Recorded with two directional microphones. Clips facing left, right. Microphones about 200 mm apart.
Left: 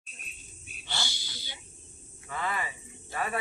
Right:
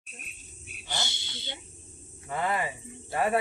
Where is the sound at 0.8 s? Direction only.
20° right (ahead or behind).